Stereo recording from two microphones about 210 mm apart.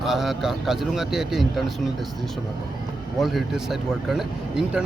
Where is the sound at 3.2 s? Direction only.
Centre (ahead or behind).